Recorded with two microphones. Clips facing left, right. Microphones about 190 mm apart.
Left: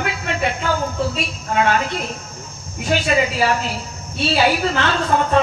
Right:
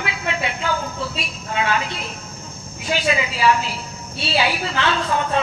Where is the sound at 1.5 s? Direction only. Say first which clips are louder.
Left 4 dB; 45° left (ahead or behind).